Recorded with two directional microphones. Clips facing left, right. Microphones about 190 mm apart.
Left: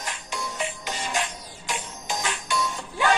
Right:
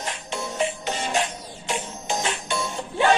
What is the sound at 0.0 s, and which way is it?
Music, 25° right (ahead or behind).